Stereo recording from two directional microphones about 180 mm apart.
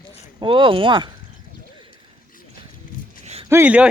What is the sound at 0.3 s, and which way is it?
Speech, 25° right (ahead or behind).